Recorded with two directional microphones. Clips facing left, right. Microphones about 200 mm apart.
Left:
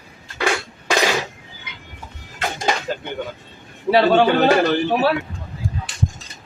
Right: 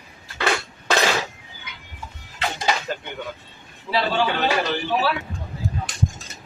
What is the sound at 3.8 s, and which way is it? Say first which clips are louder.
A man's voice: left 8 dB; 60° left (ahead or behind).